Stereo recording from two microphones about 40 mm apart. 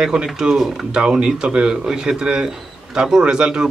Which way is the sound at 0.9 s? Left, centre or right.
Right.